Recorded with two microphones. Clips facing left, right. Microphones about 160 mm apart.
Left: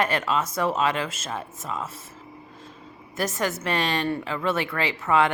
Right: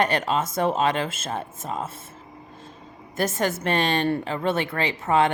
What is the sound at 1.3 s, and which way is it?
Speech, 45° right (ahead or behind).